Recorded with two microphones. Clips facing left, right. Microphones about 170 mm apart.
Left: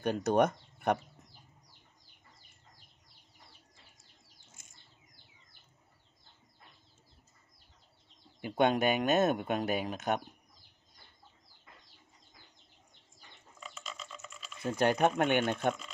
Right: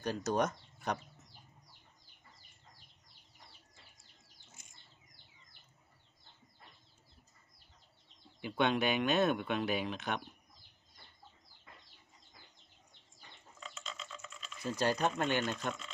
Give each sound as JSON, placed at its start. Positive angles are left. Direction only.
{"t": 0.0, "sound": "speech", "side_deg": 60}
{"t": 8.4, "sound": "speech", "side_deg": 45}
{"t": 13.6, "sound": "a sound", "side_deg": 5}
{"t": 14.6, "sound": "speech", "side_deg": 60}